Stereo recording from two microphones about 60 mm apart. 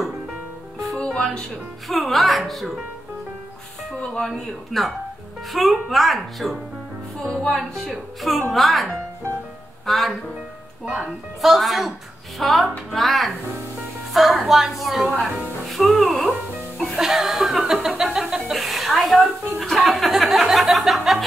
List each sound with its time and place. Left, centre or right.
0.9 s music: centre
1.9 s chuckle: centre
4.0 s speech: centre
4.3 s chuckle: centre
9.8 s speech: centre
10.9 s chuckle: centre
15.6 s music: centre
16.7 s speech: centre
17.0 s chuckle: centre
18.5 s a sound: centre
19.6 s chuckle: centre